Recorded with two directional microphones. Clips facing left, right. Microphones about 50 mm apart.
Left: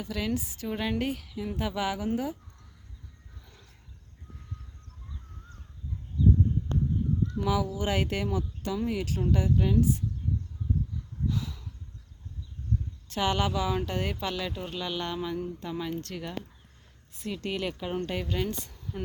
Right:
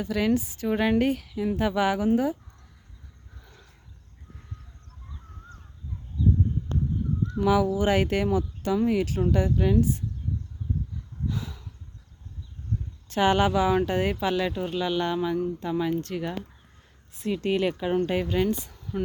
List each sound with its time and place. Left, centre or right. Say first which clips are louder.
0.0 s speech: right 7 dB; right
0.7 s speech: right 7 dB; right
7.4 s speech: right 9 dB; right
9.0 s speech: right 4 dB; right
9.3 s speech: right 1 dB; right
11.3 s a sound: even; right
13.1 s speech: right 6 dB; right
14.7 s speech: right 7 dB; centre
17.2 s speech: right 7 dB; right
17.9 s speech: right 6 dB; right
18.4 s speech: right 7 dB; centre